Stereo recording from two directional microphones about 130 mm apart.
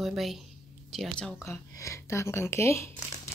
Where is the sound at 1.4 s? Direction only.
25° left (ahead or behind).